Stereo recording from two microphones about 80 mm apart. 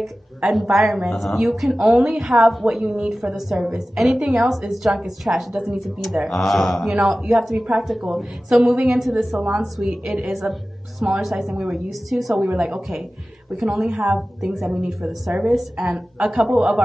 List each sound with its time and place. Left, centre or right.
0.5 s a woman's voice: centre